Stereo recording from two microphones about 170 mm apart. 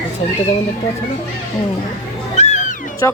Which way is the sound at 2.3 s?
40° left (ahead or behind).